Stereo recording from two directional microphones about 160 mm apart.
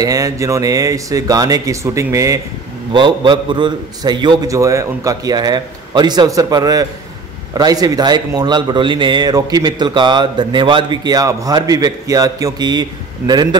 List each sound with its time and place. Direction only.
0.0 s speech: 20° right (ahead or behind)
2.9 s speech: 30° right (ahead or behind)